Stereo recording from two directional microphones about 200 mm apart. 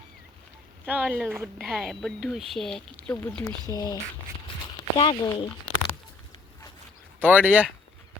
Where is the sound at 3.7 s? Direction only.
20° left (ahead or behind).